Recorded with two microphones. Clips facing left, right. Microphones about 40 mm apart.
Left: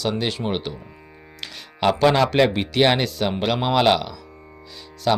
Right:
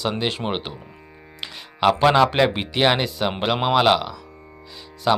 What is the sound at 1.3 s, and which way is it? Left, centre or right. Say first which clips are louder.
Music: right 2 dB; centre.